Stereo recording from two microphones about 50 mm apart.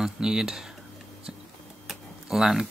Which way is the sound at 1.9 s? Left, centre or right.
Centre.